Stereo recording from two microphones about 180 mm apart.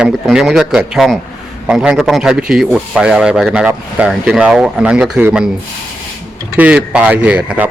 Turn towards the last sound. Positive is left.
turn(degrees=-5)  # may be behind; listen again after turning